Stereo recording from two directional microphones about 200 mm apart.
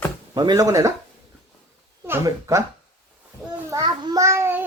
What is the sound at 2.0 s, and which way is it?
Speech, 15° right (ahead or behind).